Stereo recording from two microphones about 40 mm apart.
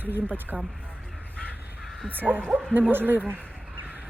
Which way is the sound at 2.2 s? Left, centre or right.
Right.